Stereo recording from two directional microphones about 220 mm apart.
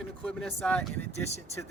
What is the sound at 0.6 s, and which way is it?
Speech, 5° left (ahead or behind).